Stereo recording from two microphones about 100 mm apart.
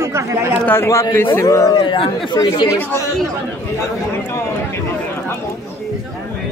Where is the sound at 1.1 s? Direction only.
25° left (ahead or behind).